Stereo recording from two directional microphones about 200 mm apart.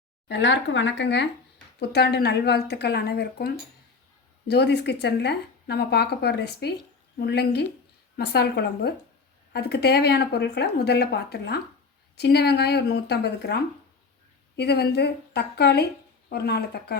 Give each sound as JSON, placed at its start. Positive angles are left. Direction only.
{"t": 0.3, "sound": "speech", "side_deg": 65}